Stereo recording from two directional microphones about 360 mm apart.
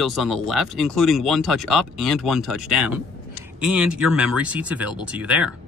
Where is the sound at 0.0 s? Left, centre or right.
Centre.